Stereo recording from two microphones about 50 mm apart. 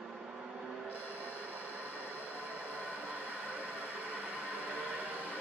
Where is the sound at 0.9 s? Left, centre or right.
Left.